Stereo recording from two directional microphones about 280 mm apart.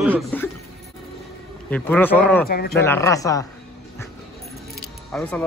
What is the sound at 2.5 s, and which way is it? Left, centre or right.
Speech, left.